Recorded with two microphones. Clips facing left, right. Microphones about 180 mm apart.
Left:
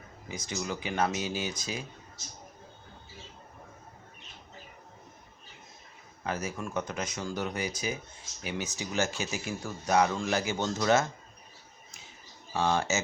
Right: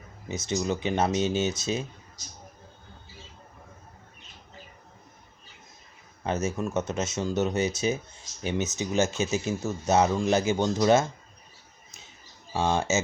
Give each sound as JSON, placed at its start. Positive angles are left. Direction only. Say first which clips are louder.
{"t": 0.3, "sound": "speech", "louder": "right 7 dB", "side_deg": -25}
{"t": 6.2, "sound": "speech", "louder": "right 6 dB", "side_deg": -25}
{"t": 12.5, "sound": "speech", "louder": "right 3 dB", "side_deg": -20}